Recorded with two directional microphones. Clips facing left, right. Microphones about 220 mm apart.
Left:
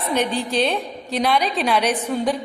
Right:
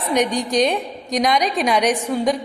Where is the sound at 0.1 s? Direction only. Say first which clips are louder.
Right 3 dB; 15° right (ahead or behind).